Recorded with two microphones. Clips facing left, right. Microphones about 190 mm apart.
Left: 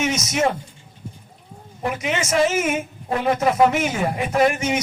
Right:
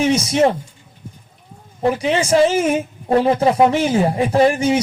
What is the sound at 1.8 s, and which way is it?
A man's voice, 30° right (ahead or behind).